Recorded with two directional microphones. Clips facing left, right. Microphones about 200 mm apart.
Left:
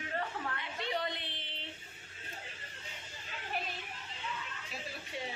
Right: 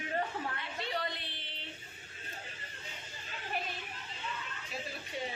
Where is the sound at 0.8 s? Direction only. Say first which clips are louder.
Left 1 dB; 20° left (ahead or behind).